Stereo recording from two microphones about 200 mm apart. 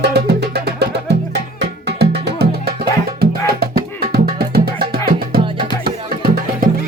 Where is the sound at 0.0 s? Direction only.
55° right (ahead or behind).